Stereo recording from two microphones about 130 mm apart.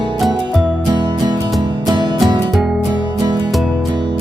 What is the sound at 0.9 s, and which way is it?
Music, 35° right (ahead or behind).